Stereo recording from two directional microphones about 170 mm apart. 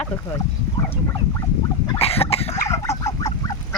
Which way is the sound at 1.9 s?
35° left (ahead or behind).